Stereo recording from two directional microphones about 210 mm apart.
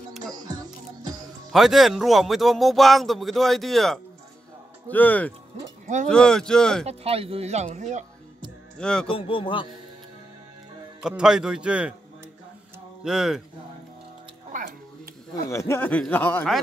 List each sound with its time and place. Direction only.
0.3 s music: 20° right (ahead or behind)
1.5 s speech: centre (ahead or behind)
6.9 s speech: 30° right (ahead or behind)
8.7 s speech: 5° left (ahead or behind)
9.1 s speech: 25° left (ahead or behind)
11.0 s speech: 5° right (ahead or behind)
13.0 s speech: centre (ahead or behind)
14.5 s music: 35° right (ahead or behind)
15.5 s speech: 15° left (ahead or behind)